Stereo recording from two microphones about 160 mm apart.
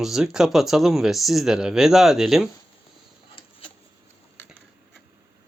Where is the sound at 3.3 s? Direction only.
35° left (ahead or behind).